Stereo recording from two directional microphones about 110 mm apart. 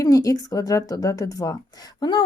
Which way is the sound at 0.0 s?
30° left (ahead or behind).